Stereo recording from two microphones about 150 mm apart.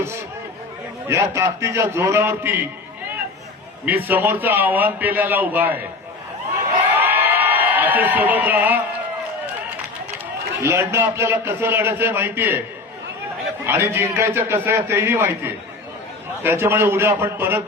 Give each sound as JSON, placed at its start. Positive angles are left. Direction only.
{"t": 1.0, "sound": "a man's voice", "side_deg": -20}
{"t": 3.8, "sound": "a man's voice", "side_deg": -10}
{"t": 6.9, "sound": "a sound", "side_deg": -10}
{"t": 10.6, "sound": "a man's voice", "side_deg": -15}
{"t": 13.7, "sound": "a man's voice", "side_deg": -15}
{"t": 16.4, "sound": "a man's voice", "side_deg": -15}